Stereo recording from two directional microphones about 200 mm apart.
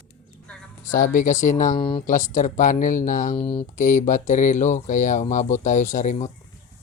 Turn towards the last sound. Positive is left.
turn(degrees=35)  # may be behind; listen again after turning